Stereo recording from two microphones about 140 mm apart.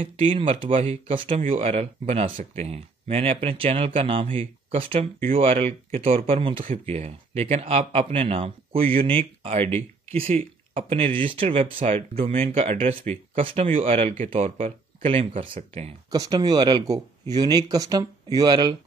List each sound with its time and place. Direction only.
0.0 s speech: 40° right (ahead or behind)
16.1 s speech: 30° right (ahead or behind)